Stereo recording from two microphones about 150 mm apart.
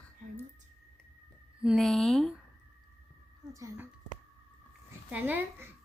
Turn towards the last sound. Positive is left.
turn(degrees=-10)  # may be behind; listen again after turning